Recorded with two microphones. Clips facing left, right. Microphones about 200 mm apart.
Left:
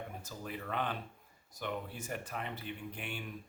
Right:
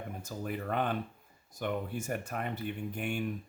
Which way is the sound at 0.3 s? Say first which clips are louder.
Right 8 dB; 50° right (ahead or behind).